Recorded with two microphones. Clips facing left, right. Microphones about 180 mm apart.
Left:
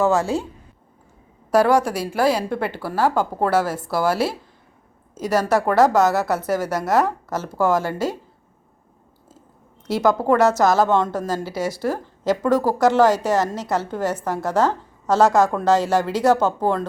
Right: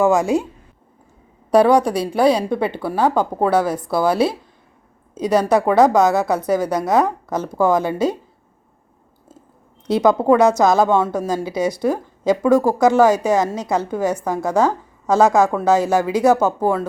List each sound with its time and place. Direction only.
0.0 s a woman's voice: 15° right (ahead or behind)
2.1 s a woman's voice: 20° right (ahead or behind)
10.0 s a woman's voice: 15° right (ahead or behind)